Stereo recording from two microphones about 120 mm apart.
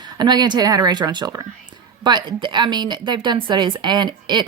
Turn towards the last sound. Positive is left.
turn(degrees=-40)  # may be behind; listen again after turning